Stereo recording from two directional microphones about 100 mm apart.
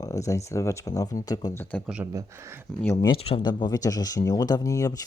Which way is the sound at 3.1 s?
70° left (ahead or behind).